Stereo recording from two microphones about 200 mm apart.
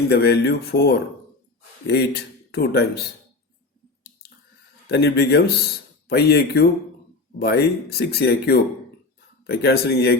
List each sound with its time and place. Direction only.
0.1 s speech: 55° left (ahead or behind)
4.9 s speech: 50° left (ahead or behind)